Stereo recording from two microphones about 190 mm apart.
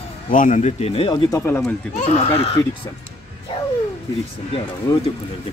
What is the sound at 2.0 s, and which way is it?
Speech, 30° left (ahead or behind).